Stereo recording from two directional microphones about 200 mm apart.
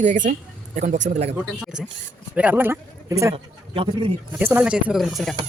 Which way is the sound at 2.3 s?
10° right (ahead or behind).